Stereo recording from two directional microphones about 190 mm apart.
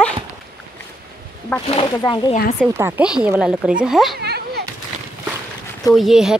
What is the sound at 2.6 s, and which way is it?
Speech, 10° right (ahead or behind).